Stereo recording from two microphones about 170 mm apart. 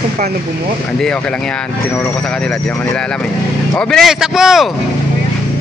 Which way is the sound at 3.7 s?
5° left (ahead or behind).